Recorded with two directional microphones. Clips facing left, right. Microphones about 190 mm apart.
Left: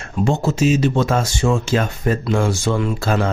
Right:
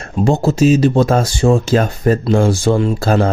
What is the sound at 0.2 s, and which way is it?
Speech, 35° right (ahead or behind).